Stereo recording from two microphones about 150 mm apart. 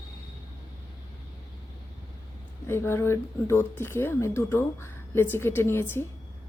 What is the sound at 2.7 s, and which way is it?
Speech, 15° left (ahead or behind).